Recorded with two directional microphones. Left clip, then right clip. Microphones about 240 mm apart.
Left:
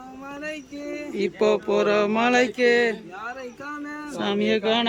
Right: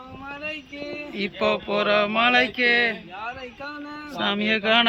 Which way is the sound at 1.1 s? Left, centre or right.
Centre.